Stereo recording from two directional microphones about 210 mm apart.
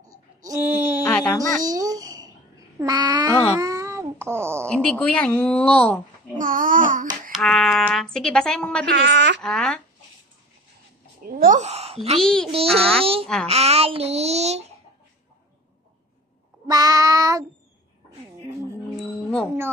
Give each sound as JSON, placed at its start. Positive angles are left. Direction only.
{"t": 0.4, "sound": "a sound", "side_deg": -10}
{"t": 1.0, "sound": "music", "side_deg": 15}
{"t": 1.6, "sound": "babbling", "side_deg": -15}
{"t": 2.8, "sound": "a sound", "side_deg": -20}
{"t": 4.6, "sound": "speech", "side_deg": 5}
{"t": 6.3, "sound": "babbling", "side_deg": -40}
{"t": 7.3, "sound": "speech", "side_deg": 0}
{"t": 8.9, "sound": "a woman's voice", "side_deg": -55}
{"t": 9.4, "sound": "speech", "side_deg": 5}
{"t": 11.2, "sound": "a woman's voice", "side_deg": -40}
{"t": 12.2, "sound": "speech", "side_deg": 5}
{"t": 12.4, "sound": "a child's voice", "side_deg": -30}
{"t": 16.6, "sound": "child singing", "side_deg": -15}